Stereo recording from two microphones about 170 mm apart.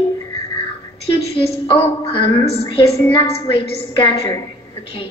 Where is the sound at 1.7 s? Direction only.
30° left (ahead or behind).